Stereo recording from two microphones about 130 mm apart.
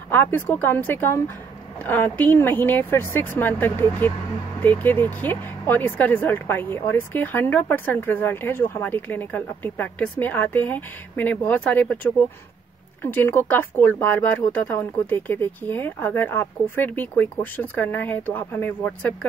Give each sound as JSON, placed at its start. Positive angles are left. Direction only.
{"t": 0.1, "sound": "speech", "side_deg": 15}